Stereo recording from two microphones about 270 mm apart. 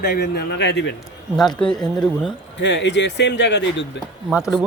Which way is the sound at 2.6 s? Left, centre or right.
Left.